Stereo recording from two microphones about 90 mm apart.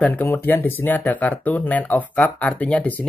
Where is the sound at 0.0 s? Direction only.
20° left (ahead or behind).